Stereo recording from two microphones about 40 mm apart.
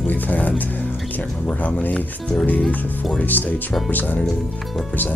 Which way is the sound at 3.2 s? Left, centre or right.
Left.